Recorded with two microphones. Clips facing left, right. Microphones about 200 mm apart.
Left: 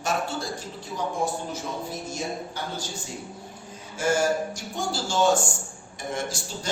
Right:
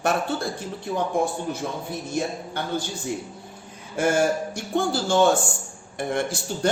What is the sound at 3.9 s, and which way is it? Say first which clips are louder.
A man's voice: right 2 dB; 60° right (ahead or behind).